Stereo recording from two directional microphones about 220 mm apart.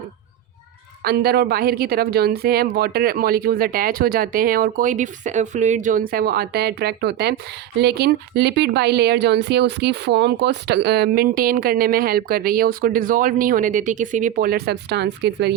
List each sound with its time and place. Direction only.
1.0 s speech: 45° right (ahead or behind)